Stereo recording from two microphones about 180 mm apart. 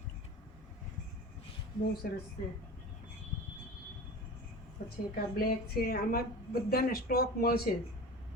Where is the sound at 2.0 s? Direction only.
55° left (ahead or behind).